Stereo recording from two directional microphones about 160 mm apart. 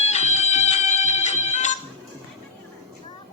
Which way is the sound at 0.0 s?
45° left (ahead or behind).